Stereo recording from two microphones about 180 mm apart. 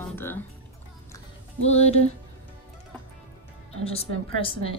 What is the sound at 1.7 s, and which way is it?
Speech, 35° left (ahead or behind).